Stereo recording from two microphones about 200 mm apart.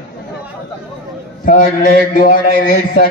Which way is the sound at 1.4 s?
40° left (ahead or behind).